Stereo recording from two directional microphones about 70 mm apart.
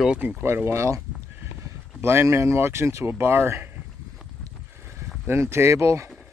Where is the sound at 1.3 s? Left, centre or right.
Right.